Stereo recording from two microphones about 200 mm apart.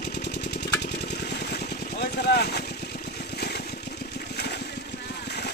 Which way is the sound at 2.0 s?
55° left (ahead or behind).